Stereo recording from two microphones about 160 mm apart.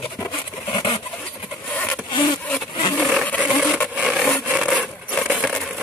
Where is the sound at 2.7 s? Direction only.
30° left (ahead or behind).